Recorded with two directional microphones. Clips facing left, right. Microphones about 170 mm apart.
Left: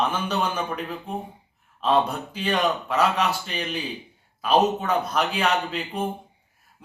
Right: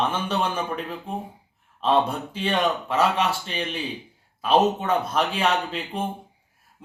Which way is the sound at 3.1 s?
30° right (ahead or behind).